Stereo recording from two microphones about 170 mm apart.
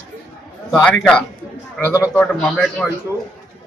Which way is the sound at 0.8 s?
5° left (ahead or behind).